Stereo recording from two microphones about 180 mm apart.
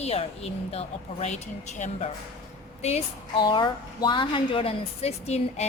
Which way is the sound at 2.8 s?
30° left (ahead or behind).